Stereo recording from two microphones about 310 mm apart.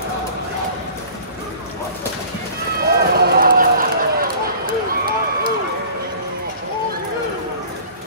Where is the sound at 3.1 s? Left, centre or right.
Right.